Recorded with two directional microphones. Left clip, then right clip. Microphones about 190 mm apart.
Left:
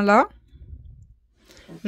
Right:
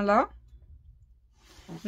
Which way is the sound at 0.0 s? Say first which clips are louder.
Left 6 dB; 40° left (ahead or behind).